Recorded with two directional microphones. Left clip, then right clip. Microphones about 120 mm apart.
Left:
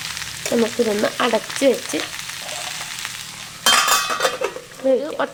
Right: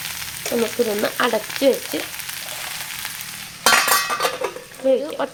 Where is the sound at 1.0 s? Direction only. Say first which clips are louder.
Left 1 dB; 10° left (ahead or behind).